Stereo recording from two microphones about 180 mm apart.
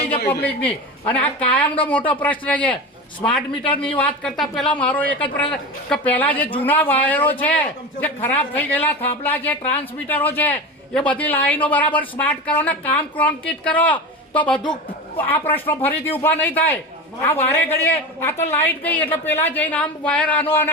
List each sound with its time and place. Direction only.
0.4 s a woman's voice: 10° left (ahead or behind)
1.6 s a woman's voice: 30° left (ahead or behind)
1.9 s a woman's voice: 10° left (ahead or behind)